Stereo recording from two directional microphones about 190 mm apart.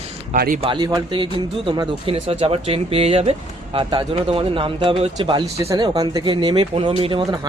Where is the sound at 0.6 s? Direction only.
20° right (ahead or behind).